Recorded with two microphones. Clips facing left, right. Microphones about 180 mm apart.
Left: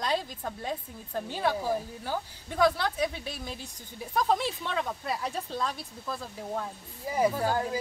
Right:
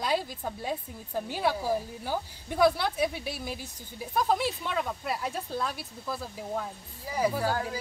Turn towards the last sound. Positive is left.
turn(degrees=20)  # may be behind; listen again after turning